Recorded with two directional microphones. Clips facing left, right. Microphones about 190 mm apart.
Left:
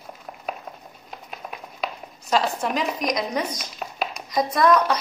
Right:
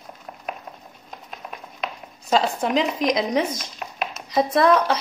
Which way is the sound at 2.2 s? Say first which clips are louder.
Right 2 dB; 25° right (ahead or behind).